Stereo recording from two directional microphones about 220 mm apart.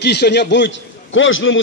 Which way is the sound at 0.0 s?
50° left (ahead or behind).